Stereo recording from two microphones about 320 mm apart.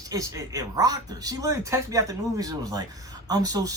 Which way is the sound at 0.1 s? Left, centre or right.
Centre.